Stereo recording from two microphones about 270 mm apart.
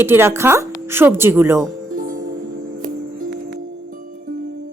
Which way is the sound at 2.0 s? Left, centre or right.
Right.